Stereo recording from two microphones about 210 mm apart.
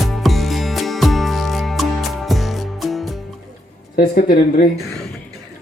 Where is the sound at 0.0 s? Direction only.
Centre (ahead or behind).